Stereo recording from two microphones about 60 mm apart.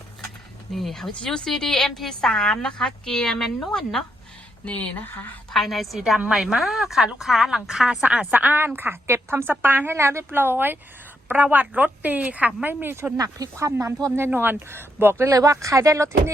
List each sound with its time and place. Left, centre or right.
0.7 s a woman's voice: centre
4.6 s speech: left
5.5 s a woman's voice: centre
8.0 s a woman's voice: right
9.9 s a woman's voice: right
11.5 s a woman's voice: right
12.6 s a woman's voice: right
13.1 s speech: right
13.6 s speech: right
14.3 s a woman's voice: right
15.2 s speech: right